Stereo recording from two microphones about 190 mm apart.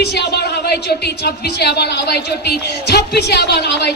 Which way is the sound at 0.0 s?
60° left (ahead or behind).